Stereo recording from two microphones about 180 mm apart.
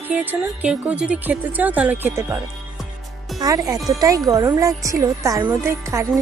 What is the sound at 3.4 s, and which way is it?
Speech, 20° right (ahead or behind).